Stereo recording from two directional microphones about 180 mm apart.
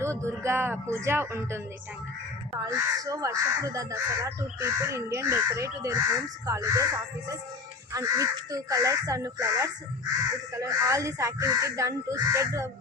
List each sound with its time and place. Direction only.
0.0 s speech: 15° right (ahead or behind)
2.6 s speech: 20° right (ahead or behind)